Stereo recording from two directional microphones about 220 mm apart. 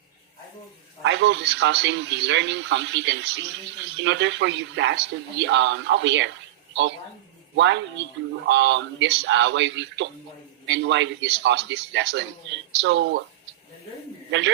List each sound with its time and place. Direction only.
1.0 s a man's voice: 55° right (ahead or behind)
7.5 s a man's voice: 55° right (ahead or behind)
14.3 s a man's voice: 55° right (ahead or behind)